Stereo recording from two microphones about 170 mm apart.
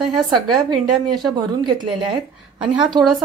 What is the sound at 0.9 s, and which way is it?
Speech, centre (ahead or behind).